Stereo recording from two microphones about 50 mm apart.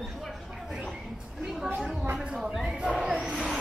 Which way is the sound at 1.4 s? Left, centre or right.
Centre.